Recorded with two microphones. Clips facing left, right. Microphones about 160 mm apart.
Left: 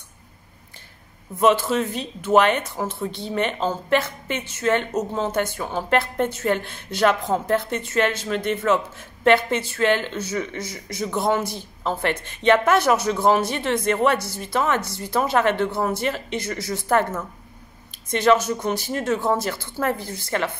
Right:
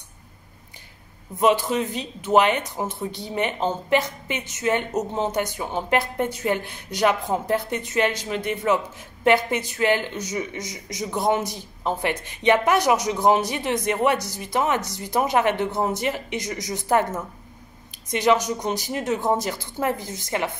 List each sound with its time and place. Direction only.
1.4 s a man's voice: 15° right (ahead or behind)